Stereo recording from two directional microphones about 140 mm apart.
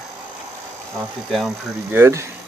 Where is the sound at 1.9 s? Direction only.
20° right (ahead or behind).